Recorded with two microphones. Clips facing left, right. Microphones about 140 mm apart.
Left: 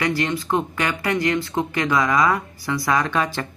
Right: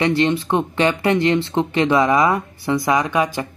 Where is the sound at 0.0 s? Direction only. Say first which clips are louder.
Right 5 dB; 25° right (ahead or behind).